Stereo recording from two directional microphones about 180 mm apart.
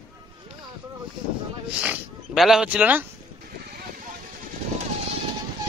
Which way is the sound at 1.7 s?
5° right (ahead or behind).